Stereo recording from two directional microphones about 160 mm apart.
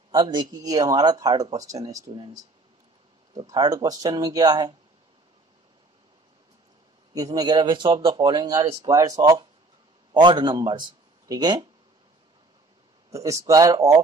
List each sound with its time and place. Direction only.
0.1 s speech: 30° right (ahead or behind)
7.2 s a man's voice: 25° right (ahead or behind)
13.1 s speech: 20° right (ahead or behind)